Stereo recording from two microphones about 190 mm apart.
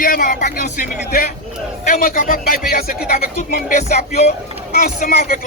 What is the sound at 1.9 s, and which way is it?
A man's voice, 50° left (ahead or behind).